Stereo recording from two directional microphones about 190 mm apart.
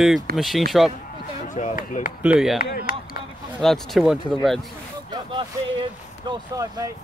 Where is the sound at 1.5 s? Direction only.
40° left (ahead or behind).